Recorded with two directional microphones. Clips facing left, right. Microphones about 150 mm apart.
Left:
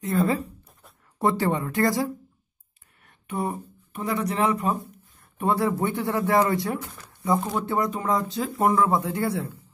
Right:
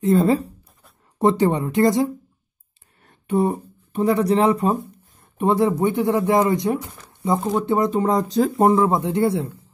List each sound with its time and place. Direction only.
0.0 s speech: 25° right (ahead or behind)
3.0 s speech: 30° right (ahead or behind)
7.1 s a sound: 20° right (ahead or behind)
7.6 s speech: 25° right (ahead or behind)
8.7 s speech: 25° right (ahead or behind)